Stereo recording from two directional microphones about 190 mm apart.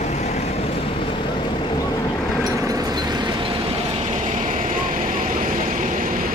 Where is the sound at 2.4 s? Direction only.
20° right (ahead or behind).